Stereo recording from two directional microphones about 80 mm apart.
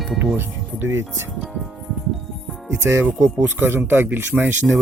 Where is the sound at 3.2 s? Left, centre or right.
Right.